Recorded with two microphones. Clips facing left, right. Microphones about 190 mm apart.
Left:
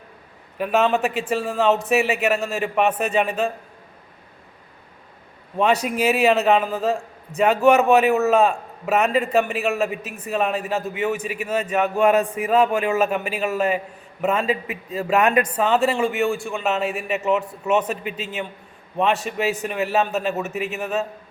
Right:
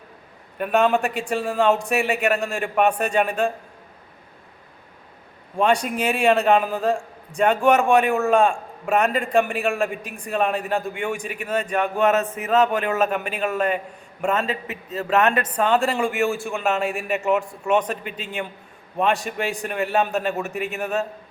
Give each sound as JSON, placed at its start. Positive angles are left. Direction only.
{"t": 0.6, "sound": "a man's voice", "side_deg": 0}
{"t": 5.5, "sound": "a man's voice", "side_deg": 5}